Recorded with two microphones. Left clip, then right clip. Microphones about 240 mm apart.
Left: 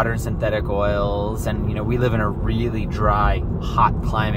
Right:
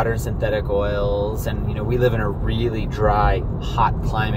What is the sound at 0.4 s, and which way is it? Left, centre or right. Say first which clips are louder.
Speech: even; centre.